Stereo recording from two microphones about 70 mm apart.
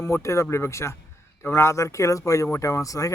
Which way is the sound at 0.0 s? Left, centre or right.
Left.